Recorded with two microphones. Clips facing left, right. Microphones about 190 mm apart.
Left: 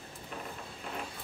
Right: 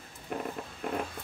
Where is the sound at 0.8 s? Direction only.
55° right (ahead or behind).